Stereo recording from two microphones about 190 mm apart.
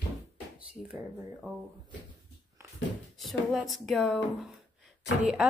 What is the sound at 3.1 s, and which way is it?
A woman's voice, centre (ahead or behind).